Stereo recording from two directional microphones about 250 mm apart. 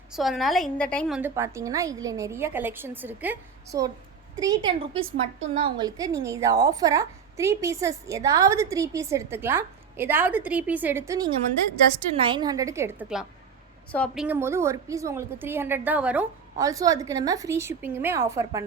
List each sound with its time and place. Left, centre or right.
0.1 s a woman's voice: centre
14.3 s a woman's voice: centre